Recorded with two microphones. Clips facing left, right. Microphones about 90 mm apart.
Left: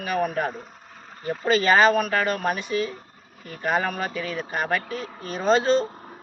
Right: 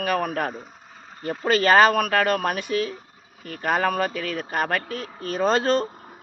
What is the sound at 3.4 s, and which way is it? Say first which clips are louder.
Speech: right 2 dB; 50° right (ahead or behind).